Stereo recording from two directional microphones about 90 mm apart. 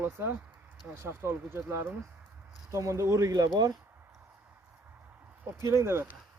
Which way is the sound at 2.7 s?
35° right (ahead or behind).